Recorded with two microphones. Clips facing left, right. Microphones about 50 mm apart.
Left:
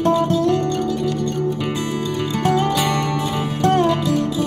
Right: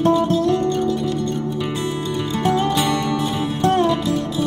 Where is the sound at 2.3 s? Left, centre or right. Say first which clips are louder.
Even; right.